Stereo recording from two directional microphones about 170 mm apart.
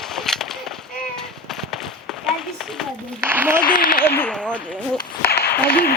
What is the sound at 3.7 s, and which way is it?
Speech, 60° left (ahead or behind).